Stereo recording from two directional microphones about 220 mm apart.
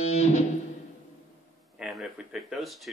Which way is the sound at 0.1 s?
30° left (ahead or behind).